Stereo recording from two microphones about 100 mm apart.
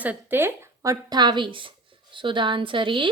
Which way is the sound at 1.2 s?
50° right (ahead or behind).